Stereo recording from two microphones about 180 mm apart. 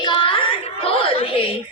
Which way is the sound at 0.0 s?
25° left (ahead or behind).